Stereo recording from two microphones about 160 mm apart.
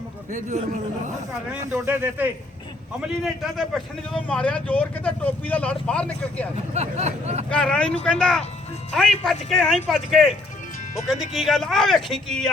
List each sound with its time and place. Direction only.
0.3 s a man's voice: 50° right (ahead or behind)
1.7 s speech: 15° right (ahead or behind)
3.2 s speech: centre (ahead or behind)
6.6 s a man's voice: 45° right (ahead or behind)
7.5 s speech: 5° left (ahead or behind)